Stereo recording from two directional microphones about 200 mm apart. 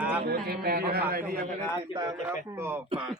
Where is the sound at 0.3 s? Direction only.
50° right (ahead or behind).